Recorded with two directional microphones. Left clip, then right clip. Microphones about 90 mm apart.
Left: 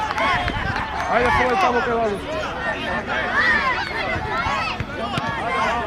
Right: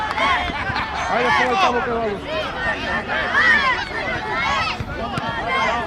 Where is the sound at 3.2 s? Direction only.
45° right (ahead or behind).